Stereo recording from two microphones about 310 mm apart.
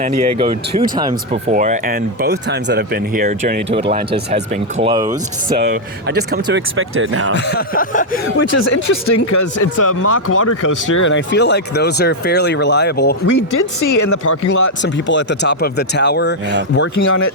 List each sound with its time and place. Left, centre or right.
0.3 s speech: centre
6.1 s speech: right
7.3 s speech: left
8.4 s speech: left
10.0 s speech: left
10.9 s speech: left
13.3 s speech: left
14.8 s speech: left
16.9 s speech: left